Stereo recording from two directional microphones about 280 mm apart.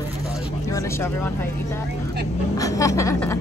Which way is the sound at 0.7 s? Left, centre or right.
Centre.